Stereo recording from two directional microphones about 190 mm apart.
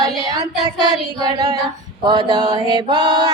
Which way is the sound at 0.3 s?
20° right (ahead or behind).